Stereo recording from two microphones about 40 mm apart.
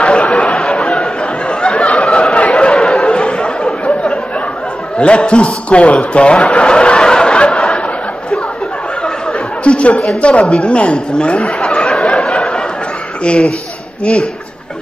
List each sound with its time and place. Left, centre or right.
0.0 s chatter: left
0.6 s chatter: centre
1.5 s snicker: left
4.9 s speech: left
7.5 s a sound: centre
9.7 s a woman's voice: left
12.2 s a sound: centre
13.2 s a woman's voice: left